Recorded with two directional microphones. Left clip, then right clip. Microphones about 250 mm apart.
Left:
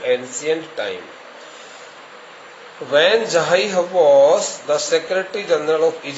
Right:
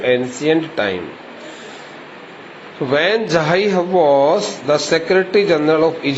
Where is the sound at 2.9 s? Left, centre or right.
Centre.